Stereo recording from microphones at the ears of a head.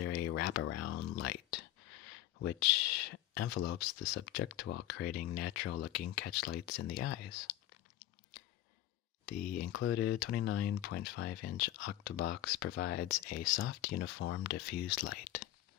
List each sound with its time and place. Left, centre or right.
0.0 s speech: left